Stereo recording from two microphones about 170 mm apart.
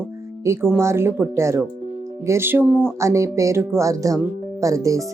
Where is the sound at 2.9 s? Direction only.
15° right (ahead or behind).